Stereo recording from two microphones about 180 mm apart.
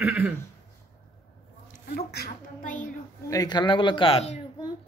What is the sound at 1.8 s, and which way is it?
A woman's voice, 60° left (ahead or behind).